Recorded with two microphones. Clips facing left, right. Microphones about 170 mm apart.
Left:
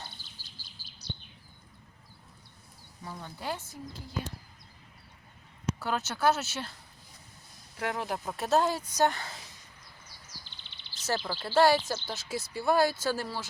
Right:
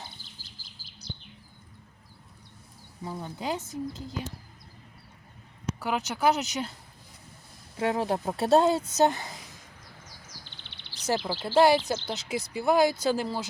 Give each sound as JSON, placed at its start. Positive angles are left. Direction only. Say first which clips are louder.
{"t": 3.0, "sound": "speech", "louder": "right 5 dB", "side_deg": -20}
{"t": 5.8, "sound": "speech", "louder": "right 2 dB", "side_deg": -15}
{"t": 7.8, "sound": "speech", "louder": "right 6 dB", "side_deg": -25}
{"t": 10.2, "sound": "bird", "louder": "right 3 dB", "side_deg": -65}
{"t": 11.4, "sound": "speech", "louder": "right 3 dB", "side_deg": -20}